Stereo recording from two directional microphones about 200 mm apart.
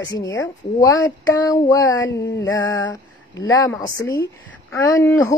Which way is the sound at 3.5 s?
20° left (ahead or behind).